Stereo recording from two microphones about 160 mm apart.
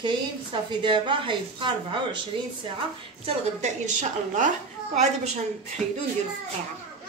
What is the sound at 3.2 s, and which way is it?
A woman's voice, 50° right (ahead or behind).